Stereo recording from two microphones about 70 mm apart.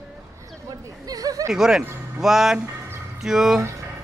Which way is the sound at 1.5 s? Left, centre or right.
Centre.